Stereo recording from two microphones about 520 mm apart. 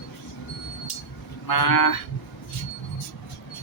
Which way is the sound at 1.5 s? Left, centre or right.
Left.